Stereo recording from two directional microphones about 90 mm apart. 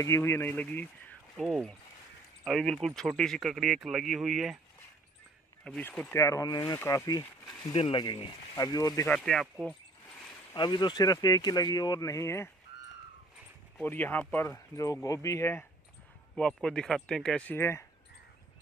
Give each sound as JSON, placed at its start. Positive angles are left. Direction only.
{"t": 0.0, "sound": "speech", "side_deg": 30}
{"t": 2.4, "sound": "speech", "side_deg": 5}
{"t": 5.8, "sound": "speech", "side_deg": 20}
{"t": 6.1, "sound": "speech", "side_deg": 35}
{"t": 7.7, "sound": "speech", "side_deg": 80}
{"t": 9.0, "sound": "speech", "side_deg": 5}
{"t": 10.5, "sound": "speech", "side_deg": 55}
{"t": 12.1, "sound": "speech", "side_deg": 30}
{"t": 13.8, "sound": "speech", "side_deg": 20}
{"t": 14.4, "sound": "speech", "side_deg": 35}
{"t": 16.3, "sound": "speech", "side_deg": 10}
{"t": 17.5, "sound": "speech", "side_deg": 25}